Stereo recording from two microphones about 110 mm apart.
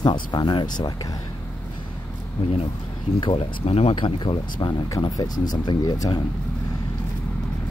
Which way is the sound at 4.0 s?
50° left (ahead or behind).